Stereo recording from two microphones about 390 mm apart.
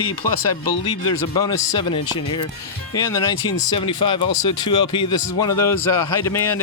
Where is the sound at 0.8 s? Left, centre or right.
Centre.